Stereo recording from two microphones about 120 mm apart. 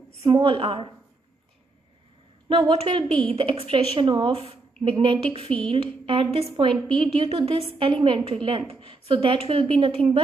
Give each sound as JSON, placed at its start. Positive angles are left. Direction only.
{"t": 0.3, "sound": "a woman's voice", "side_deg": -45}
{"t": 2.4, "sound": "a woman's voice", "side_deg": -40}
{"t": 7.2, "sound": "a woman's voice", "side_deg": -55}